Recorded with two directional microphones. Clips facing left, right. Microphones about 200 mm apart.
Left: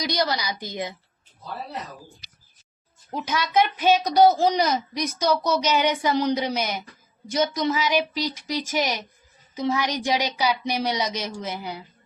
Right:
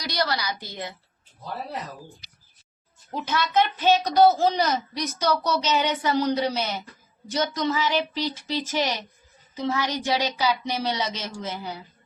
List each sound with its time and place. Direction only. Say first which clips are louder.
0.0 s a woman's voice: left 2 dB; 15° left (ahead or behind)
3.2 s a woman's voice: left 1 dB; 15° left (ahead or behind)